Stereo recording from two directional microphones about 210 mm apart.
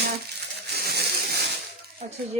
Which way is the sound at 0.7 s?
50° right (ahead or behind).